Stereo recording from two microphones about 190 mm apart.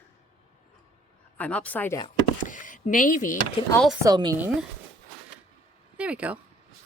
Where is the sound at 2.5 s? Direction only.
45° left (ahead or behind).